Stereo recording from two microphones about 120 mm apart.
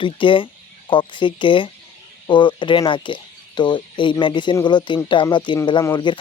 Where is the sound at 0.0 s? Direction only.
45° left (ahead or behind).